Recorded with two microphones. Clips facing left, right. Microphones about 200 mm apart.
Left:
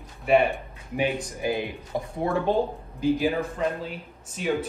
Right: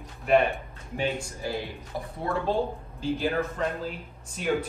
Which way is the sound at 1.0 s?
15° left (ahead or behind).